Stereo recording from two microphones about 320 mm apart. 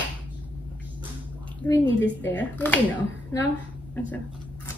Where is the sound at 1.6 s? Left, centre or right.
Centre.